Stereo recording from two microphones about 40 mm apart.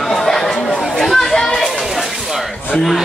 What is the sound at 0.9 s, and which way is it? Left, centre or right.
Chatter, centre.